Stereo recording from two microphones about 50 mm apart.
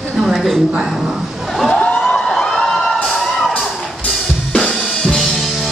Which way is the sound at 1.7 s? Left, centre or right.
Centre.